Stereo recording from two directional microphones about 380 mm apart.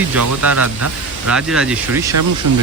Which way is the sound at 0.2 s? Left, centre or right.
Right.